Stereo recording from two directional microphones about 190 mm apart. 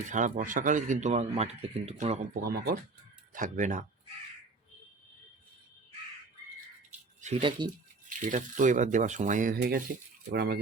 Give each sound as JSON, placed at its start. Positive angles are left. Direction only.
{"t": 0.1, "sound": "speech", "side_deg": -40}
{"t": 2.3, "sound": "speech", "side_deg": -55}
{"t": 3.3, "sound": "speech", "side_deg": -45}
{"t": 7.2, "sound": "speech", "side_deg": -35}
{"t": 8.2, "sound": "speech", "side_deg": -40}